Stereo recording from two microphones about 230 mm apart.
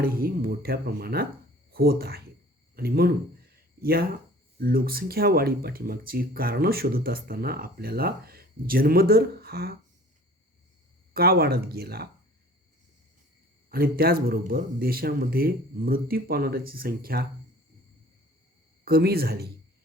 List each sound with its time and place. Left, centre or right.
0.0 s speech: right
11.1 s speech: right
13.7 s speech: right
18.9 s speech: right